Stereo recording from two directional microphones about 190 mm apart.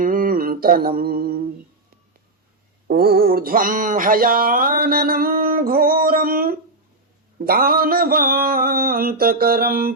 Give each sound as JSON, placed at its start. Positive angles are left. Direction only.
{"t": 0.0, "sound": "mantra", "side_deg": -45}
{"t": 2.8, "sound": "mantra", "side_deg": -55}